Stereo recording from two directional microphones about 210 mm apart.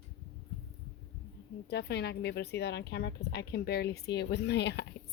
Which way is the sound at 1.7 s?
50° left (ahead or behind).